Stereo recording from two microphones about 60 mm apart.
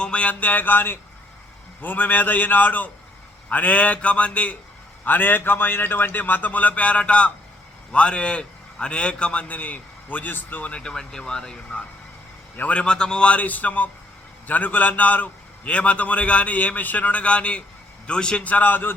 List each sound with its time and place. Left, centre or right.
0.0 s a man's voice: centre
5.0 s a man's voice: left
10.7 s speech: centre
12.5 s a man's voice: left
12.8 s a man's voice: centre; by 18.9 s left